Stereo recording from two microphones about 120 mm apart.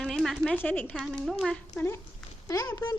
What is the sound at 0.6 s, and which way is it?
Speech, 15° left (ahead or behind).